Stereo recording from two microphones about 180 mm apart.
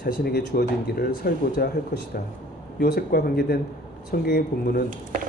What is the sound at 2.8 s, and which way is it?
Speech, 55° left (ahead or behind).